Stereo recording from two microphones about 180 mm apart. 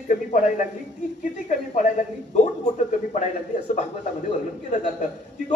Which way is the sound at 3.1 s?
40° left (ahead or behind).